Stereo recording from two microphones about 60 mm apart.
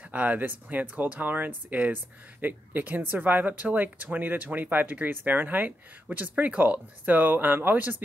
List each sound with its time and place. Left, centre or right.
0.0 s speech: right